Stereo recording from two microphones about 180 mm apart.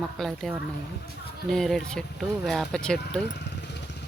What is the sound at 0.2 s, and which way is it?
Speech, centre (ahead or behind).